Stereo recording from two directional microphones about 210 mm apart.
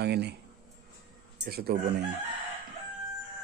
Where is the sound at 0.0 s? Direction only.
50° right (ahead or behind).